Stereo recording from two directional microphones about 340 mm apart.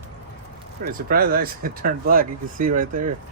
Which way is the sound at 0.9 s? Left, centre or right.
Right.